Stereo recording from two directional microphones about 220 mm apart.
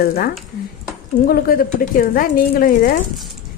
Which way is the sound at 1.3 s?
40° left (ahead or behind).